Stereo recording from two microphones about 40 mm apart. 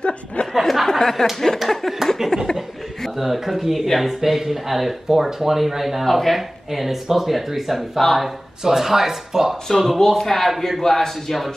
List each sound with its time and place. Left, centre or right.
0.5 s a sound: centre
3.2 s speech: centre
9.7 s speech: centre